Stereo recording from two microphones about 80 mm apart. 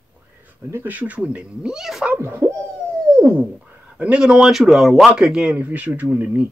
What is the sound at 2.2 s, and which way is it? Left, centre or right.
Hoot, right.